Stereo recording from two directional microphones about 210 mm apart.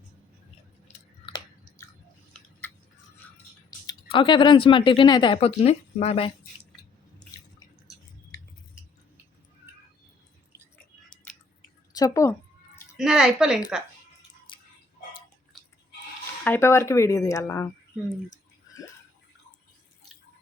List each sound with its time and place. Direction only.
0.9 s chewing: 25° left (ahead or behind)
2.3 s tick-tock: 10° left (ahead or behind)
3.8 s speech: 25° left (ahead or behind)
8.3 s a sound: 15° left (ahead or behind)
11.9 s speech: 15° left (ahead or behind)
13.0 s a woman's voice: 5° right (ahead or behind)
15.5 s a sound: centre (ahead or behind)
16.4 s speech: 10° left (ahead or behind)